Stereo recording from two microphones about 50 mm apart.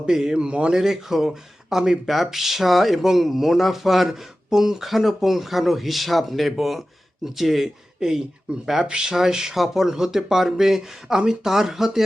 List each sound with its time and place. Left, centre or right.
0.1 s speech: centre
0.4 s speech: right
0.8 s speech: centre